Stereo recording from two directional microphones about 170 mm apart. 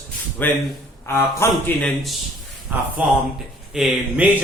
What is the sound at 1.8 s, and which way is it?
Speech, centre (ahead or behind).